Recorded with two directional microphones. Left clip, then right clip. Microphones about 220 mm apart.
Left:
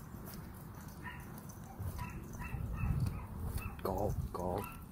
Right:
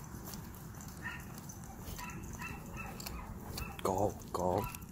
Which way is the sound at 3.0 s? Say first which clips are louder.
Right 2 dB; 20° right (ahead or behind).